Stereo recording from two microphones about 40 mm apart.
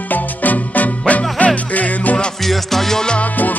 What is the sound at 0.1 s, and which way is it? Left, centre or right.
Music, left.